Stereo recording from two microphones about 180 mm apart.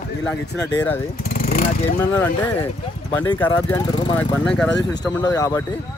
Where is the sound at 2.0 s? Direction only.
10° left (ahead or behind).